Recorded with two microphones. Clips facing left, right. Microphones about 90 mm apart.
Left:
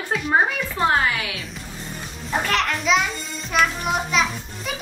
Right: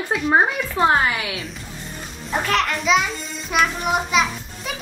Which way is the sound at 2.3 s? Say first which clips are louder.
Right 1 dB; centre (ahead or behind).